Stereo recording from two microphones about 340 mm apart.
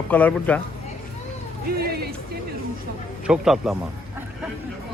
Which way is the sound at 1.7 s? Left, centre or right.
Right.